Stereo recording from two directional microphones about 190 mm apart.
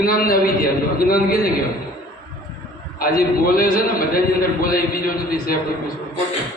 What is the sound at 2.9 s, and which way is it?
A man's voice, 50° left (ahead or behind).